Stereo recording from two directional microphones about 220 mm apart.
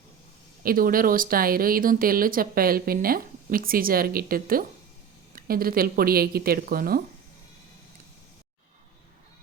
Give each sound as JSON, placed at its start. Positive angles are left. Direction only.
{"t": 0.6, "sound": "speech", "side_deg": -40}